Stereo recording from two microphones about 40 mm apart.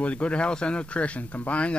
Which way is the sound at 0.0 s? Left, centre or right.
Left.